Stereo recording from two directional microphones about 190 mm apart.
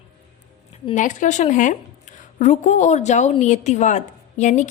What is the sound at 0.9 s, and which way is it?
A woman's voice, 40° left (ahead or behind).